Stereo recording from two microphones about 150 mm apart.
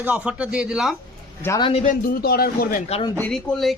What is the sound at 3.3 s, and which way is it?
Speech, centre (ahead or behind).